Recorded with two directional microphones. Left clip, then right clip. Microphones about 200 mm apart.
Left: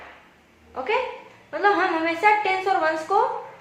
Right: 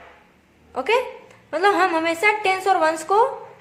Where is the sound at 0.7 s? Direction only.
55° right (ahead or behind).